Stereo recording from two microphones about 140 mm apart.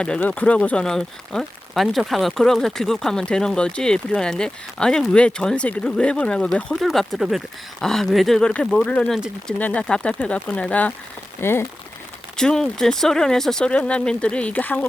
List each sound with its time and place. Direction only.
0.0 s speech: 10° left (ahead or behind)
12.4 s speech: 5° left (ahead or behind)